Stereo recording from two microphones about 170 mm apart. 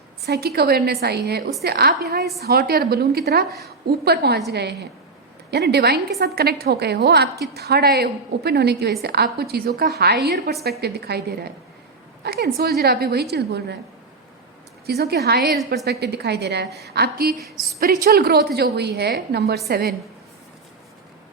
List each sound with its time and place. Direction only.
0.3 s a woman's voice: 70° right (ahead or behind)
14.8 s a woman's voice: 70° right (ahead or behind)